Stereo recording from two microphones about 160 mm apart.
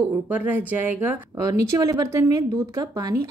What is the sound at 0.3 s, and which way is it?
Speech, 10° right (ahead or behind).